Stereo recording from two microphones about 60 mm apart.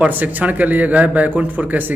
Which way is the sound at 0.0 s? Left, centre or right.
Right.